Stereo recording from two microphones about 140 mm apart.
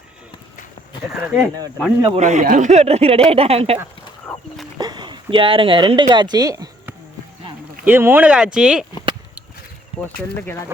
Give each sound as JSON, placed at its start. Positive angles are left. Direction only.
{"t": 1.2, "sound": "speech", "side_deg": -10}
{"t": 2.1, "sound": "speech", "side_deg": -55}
{"t": 4.8, "sound": "speech", "side_deg": -30}
{"t": 7.9, "sound": "speech", "side_deg": -15}
{"t": 10.2, "sound": "speech", "side_deg": 15}